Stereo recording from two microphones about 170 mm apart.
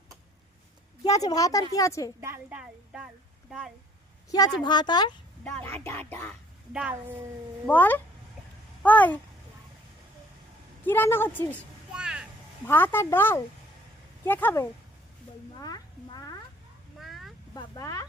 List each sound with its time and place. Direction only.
1.0 s a woman's voice: 20° left (ahead or behind)
2.2 s speech: 10° right (ahead or behind)
4.3 s speech: 20° left (ahead or behind)
5.4 s speech: 5° left (ahead or behind)
6.7 s speech: 5° right (ahead or behind)
7.7 s speech: 10° left (ahead or behind)
10.8 s speech: 10° left (ahead or behind)
11.5 s a sound: 5° right (ahead or behind)
12.6 s speech: 10° left (ahead or behind)
15.6 s cat: 25° left (ahead or behind)
17.0 s vehicle: centre (ahead or behind)
17.5 s speech: 20° left (ahead or behind)